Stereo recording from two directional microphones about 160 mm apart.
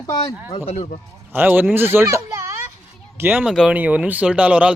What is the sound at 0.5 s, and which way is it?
Speech, 40° left (ahead or behind).